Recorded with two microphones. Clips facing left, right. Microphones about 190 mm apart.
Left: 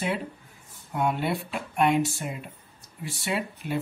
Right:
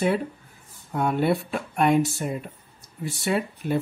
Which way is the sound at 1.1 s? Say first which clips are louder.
Right 6 dB; 45° right (ahead or behind).